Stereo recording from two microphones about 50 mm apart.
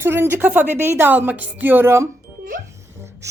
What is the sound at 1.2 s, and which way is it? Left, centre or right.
Speech, right.